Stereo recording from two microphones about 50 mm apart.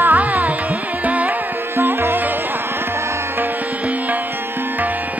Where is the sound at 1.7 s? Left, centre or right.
Right.